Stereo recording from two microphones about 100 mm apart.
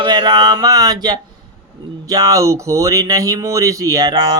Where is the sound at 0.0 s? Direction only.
45° right (ahead or behind).